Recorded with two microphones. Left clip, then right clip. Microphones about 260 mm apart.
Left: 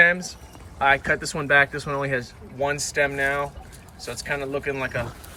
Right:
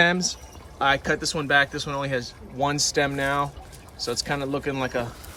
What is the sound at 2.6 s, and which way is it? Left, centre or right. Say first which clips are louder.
Speech: even; right.